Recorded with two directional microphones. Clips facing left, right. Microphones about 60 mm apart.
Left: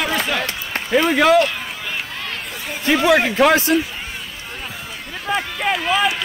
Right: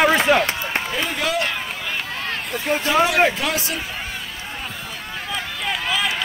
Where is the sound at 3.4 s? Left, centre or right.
Left.